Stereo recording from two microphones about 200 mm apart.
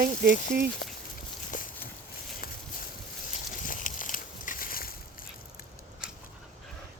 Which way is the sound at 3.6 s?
40° left (ahead or behind).